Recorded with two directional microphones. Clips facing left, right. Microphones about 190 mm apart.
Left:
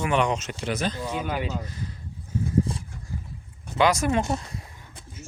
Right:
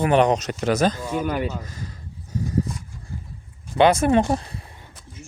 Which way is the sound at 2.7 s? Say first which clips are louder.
Left 1 dB; 30° left (ahead or behind).